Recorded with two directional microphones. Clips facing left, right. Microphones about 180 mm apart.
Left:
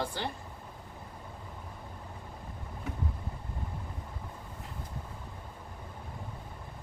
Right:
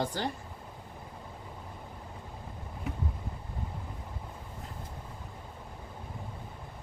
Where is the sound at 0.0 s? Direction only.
45° right (ahead or behind).